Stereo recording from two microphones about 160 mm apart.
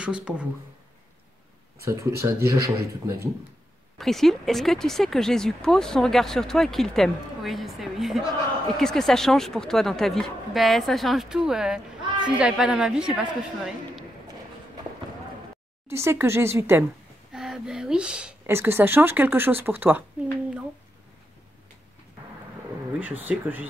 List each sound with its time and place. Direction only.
0.0 s speech: 5° right (ahead or behind)
1.9 s speech: 15° right (ahead or behind)
4.0 s speech: centre (ahead or behind)
15.9 s speech: 15° right (ahead or behind)
17.3 s speech: 5° right (ahead or behind)
22.9 s speech: 10° right (ahead or behind)